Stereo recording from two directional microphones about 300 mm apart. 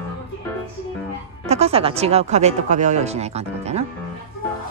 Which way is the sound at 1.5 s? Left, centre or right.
Centre.